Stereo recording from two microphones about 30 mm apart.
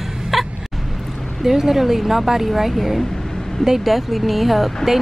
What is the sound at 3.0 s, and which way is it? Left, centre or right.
Vehicle, centre.